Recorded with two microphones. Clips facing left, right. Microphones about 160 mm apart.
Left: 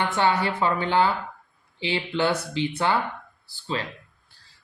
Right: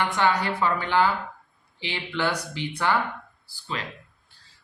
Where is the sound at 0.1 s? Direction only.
25° left (ahead or behind).